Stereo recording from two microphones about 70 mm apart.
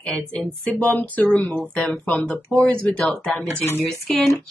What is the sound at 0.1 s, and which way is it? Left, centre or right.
Speech, centre.